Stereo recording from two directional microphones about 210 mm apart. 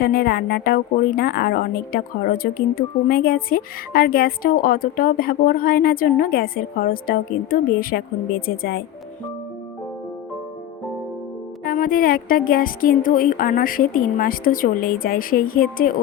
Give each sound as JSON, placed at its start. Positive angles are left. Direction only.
{"t": 0.0, "sound": "a woman's voice", "side_deg": 45}
{"t": 11.6, "sound": "speech", "side_deg": 40}